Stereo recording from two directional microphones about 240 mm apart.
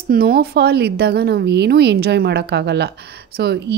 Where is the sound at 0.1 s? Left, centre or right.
Right.